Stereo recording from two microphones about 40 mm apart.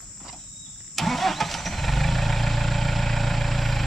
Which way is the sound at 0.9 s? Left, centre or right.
Centre.